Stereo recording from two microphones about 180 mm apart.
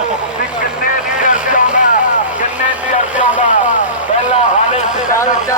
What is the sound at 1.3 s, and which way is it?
Vehicle, 45° left (ahead or behind).